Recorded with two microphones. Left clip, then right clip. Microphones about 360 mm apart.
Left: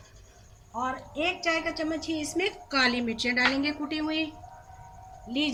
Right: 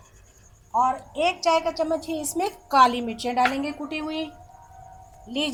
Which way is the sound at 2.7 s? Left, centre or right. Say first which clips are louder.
Right 9 dB; right.